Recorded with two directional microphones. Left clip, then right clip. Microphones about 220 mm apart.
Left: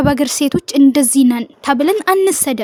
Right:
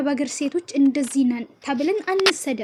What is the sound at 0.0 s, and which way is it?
Speech, 50° left (ahead or behind).